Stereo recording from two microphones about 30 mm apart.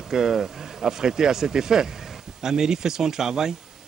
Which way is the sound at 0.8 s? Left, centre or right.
Centre.